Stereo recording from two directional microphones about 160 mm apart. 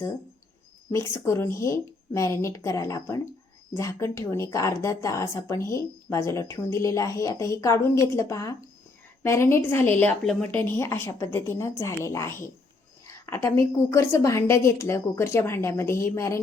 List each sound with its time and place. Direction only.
1.2 s a woman's voice: 15° left (ahead or behind)